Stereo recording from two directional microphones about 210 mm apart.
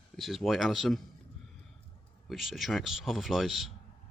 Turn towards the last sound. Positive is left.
turn(degrees=0)  # may be behind; listen again after turning